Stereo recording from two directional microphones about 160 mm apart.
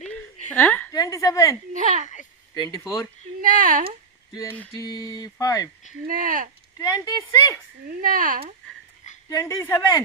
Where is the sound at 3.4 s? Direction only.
55° right (ahead or behind).